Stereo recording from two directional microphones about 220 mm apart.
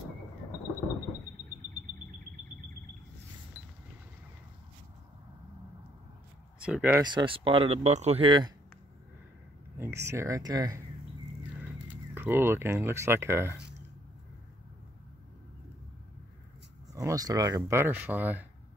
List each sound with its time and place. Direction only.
6.6 s speech: 5° right (ahead or behind)
7.0 s speech: 20° right (ahead or behind)
9.8 s speech: 10° right (ahead or behind)
16.9 s speech: 15° right (ahead or behind)